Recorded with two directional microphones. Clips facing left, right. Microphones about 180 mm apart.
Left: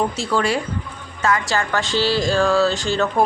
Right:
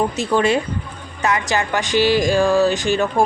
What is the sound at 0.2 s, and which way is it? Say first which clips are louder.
Speech: right 3 dB; 20° right (ahead or behind).